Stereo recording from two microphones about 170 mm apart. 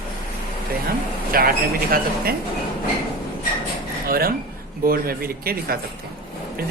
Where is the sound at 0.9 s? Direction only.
60° right (ahead or behind).